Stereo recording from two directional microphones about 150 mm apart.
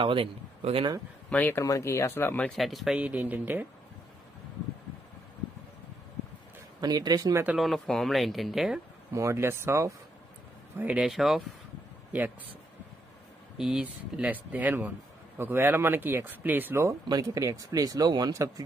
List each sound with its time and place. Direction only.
0.0 s a man's voice: 35° right (ahead or behind)
1.3 s speech: 10° left (ahead or behind); by 3.6 s 10° right (ahead or behind)
6.8 s speech: 25° right (ahead or behind)
7.4 s speech: centre (ahead or behind)
9.1 s speech: 15° right (ahead or behind); by 11.4 s centre (ahead or behind)
13.6 s speech: 5° right (ahead or behind); by 18.5 s 25° right (ahead or behind)